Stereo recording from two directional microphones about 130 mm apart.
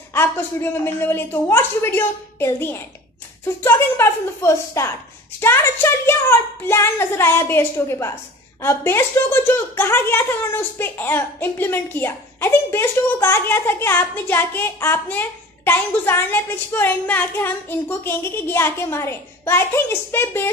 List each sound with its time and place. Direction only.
0.1 s a woman's voice: 20° left (ahead or behind)